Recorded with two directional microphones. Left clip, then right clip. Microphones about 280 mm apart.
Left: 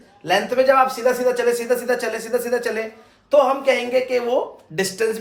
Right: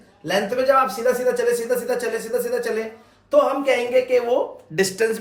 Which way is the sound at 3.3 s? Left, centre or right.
Centre.